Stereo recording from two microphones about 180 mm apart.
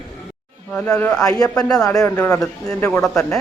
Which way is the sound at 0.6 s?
5° left (ahead or behind).